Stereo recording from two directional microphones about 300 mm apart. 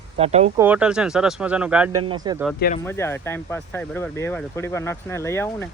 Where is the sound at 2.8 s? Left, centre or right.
Centre.